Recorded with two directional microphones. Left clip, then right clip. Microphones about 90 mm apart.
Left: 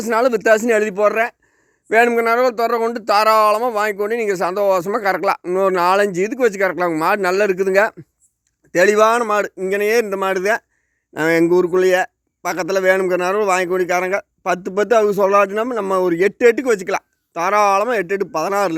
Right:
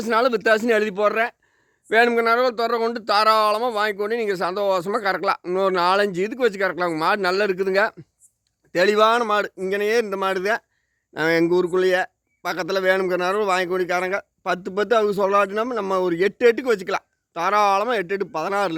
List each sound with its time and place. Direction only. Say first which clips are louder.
0.0 s a man's voice: left 3 dB; 40° left (ahead or behind)
5.4 s a man's voice: left 4 dB; 35° left (ahead or behind)